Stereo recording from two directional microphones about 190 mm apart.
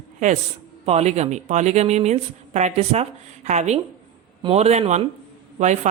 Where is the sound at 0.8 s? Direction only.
35° right (ahead or behind).